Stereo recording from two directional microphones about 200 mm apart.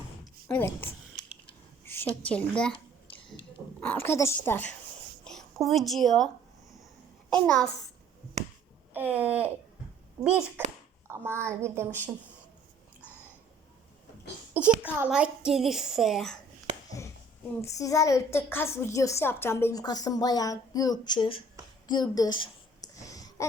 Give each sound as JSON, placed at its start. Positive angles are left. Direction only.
{"t": 0.4, "sound": "a child's voice", "side_deg": 10}
{"t": 3.8, "sound": "a child's voice", "side_deg": 10}
{"t": 7.3, "sound": "a child's voice", "side_deg": 5}
{"t": 8.9, "sound": "a sound", "side_deg": -10}
{"t": 10.2, "sound": "a child's voice", "side_deg": -5}
{"t": 14.5, "sound": "a sound", "side_deg": -10}
{"t": 14.9, "sound": "a child's voice", "side_deg": -5}
{"t": 17.6, "sound": "a child's voice", "side_deg": 15}
{"t": 21.8, "sound": "a sound", "side_deg": 20}